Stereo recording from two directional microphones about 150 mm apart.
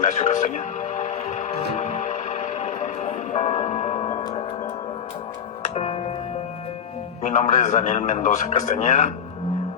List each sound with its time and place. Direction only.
0.0 s music: 50° left (ahead or behind)
5.6 s music: 45° left (ahead or behind)
7.2 s a man's voice: 50° left (ahead or behind)